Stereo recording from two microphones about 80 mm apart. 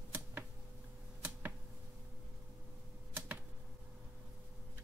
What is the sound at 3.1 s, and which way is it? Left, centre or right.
Typewriter, right.